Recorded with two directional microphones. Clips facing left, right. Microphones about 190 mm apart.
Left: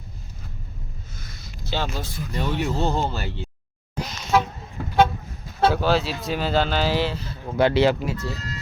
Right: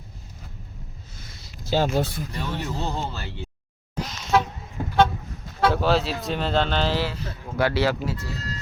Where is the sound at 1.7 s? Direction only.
45° right (ahead or behind).